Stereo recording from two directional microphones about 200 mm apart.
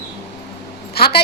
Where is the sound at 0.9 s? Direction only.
50° left (ahead or behind).